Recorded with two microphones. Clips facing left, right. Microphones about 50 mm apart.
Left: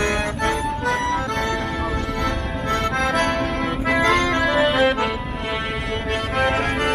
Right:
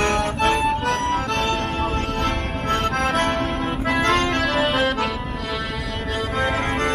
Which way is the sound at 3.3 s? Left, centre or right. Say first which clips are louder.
Left 1 dB; centre.